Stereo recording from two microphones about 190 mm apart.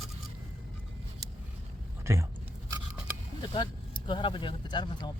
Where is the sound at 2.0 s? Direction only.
15° right (ahead or behind).